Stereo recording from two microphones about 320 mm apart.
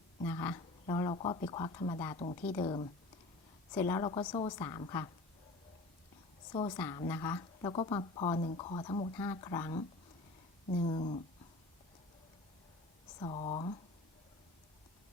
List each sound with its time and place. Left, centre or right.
0.2 s speech: centre
6.5 s speech: centre
13.1 s speech: centre